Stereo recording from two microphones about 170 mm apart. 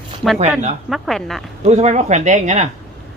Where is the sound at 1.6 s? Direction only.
40° right (ahead or behind).